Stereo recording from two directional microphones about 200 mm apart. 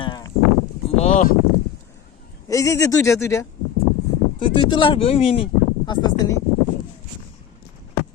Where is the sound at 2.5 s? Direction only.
15° left (ahead or behind).